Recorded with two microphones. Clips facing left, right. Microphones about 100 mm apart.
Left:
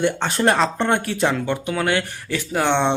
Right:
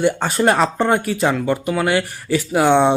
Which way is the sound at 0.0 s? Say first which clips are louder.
Right 3 dB; 5° right (ahead or behind).